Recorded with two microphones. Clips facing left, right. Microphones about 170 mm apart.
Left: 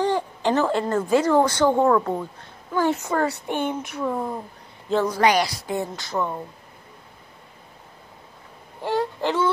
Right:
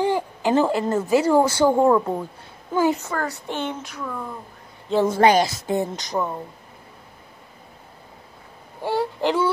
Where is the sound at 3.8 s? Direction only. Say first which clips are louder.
Left 6 dB; 30° left (ahead or behind).